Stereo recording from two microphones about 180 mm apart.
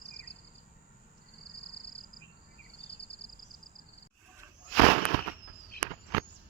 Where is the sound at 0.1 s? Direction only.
70° left (ahead or behind).